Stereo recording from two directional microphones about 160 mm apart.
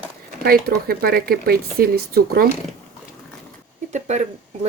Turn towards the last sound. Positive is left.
turn(degrees=-45)  # may be behind; listen again after turning